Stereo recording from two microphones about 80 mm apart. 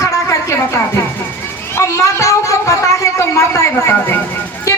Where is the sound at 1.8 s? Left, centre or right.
Left.